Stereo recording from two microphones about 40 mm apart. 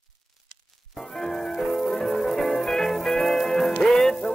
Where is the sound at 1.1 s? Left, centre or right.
Centre.